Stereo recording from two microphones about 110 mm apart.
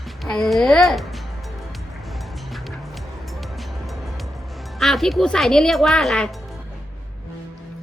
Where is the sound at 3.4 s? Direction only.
Centre (ahead or behind).